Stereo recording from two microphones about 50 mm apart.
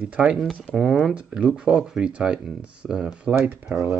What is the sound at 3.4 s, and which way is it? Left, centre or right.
Speech, right.